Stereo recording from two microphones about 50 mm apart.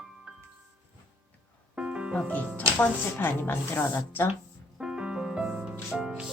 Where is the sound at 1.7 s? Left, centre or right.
Right.